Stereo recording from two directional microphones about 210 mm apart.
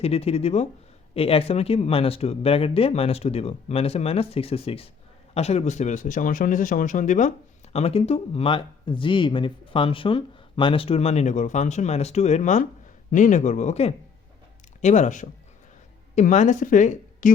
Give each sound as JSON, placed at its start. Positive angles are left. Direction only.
{"t": 0.0, "sound": "speech", "side_deg": 30}